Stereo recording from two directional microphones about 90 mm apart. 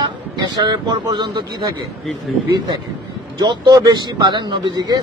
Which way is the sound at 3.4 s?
55° right (ahead or behind).